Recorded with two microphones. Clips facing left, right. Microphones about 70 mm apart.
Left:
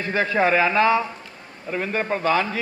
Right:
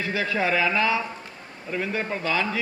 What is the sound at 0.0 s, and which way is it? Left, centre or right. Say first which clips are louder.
A man's voice: left 5 dB; left.